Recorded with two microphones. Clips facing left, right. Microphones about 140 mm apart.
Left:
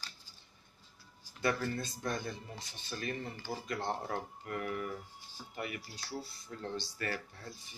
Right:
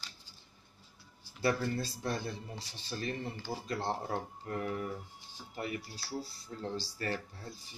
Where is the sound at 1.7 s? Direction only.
30° right (ahead or behind).